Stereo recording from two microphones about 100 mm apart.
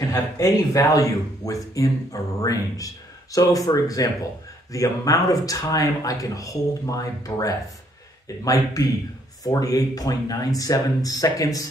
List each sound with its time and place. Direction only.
0.1 s speech: 35° left (ahead or behind)